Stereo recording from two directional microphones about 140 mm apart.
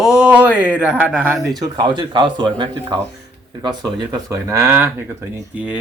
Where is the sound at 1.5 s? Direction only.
30° right (ahead or behind).